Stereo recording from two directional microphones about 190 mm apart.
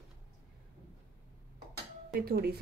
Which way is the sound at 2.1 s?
55° right (ahead or behind).